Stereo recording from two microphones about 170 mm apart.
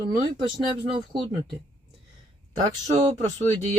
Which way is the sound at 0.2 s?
25° right (ahead or behind).